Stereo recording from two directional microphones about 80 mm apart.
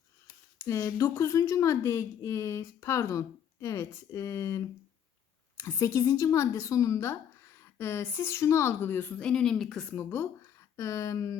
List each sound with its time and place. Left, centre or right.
0.6 s speech: left
9.2 s a woman's voice: centre
9.9 s speech: left